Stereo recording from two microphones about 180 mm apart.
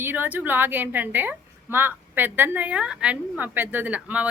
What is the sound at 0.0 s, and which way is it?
A woman's voice, 10° right (ahead or behind).